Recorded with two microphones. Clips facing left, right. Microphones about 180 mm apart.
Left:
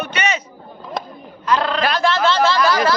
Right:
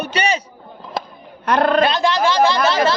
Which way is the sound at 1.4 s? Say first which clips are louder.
Right 3 dB; 55° right (ahead or behind).